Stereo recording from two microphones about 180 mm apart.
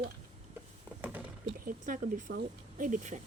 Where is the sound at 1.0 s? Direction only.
10° right (ahead or behind).